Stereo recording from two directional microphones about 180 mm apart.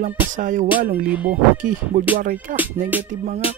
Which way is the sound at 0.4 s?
45° right (ahead or behind).